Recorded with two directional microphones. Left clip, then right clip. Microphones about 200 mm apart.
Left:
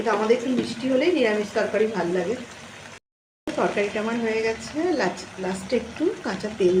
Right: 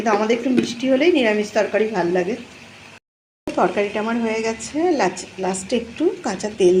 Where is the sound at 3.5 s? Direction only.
10° right (ahead or behind).